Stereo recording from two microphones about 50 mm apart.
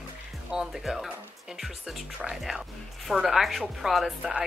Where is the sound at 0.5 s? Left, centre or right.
Centre.